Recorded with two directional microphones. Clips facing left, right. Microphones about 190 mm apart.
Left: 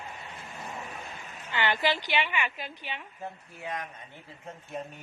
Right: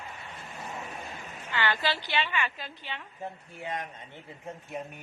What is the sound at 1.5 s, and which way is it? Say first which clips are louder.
A woman's voice: left 2 dB; 20° left (ahead or behind).